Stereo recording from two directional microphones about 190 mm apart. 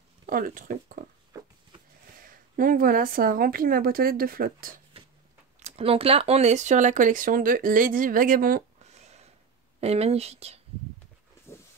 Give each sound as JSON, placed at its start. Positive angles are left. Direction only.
{"t": 0.3, "sound": "a woman's voice", "side_deg": -45}
{"t": 2.2, "sound": "a woman's voice", "side_deg": -45}
{"t": 4.9, "sound": "a sound", "side_deg": -30}
{"t": 5.6, "sound": "speech", "side_deg": -30}